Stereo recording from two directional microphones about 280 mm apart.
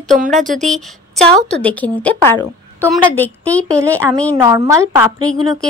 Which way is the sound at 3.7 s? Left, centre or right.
Centre.